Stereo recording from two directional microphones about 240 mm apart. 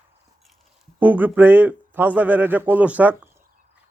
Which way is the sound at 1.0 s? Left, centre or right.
Centre.